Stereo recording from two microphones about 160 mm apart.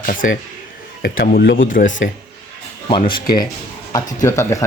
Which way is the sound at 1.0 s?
75° left (ahead or behind).